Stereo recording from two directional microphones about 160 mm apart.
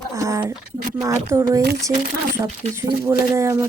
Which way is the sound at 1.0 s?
20° right (ahead or behind).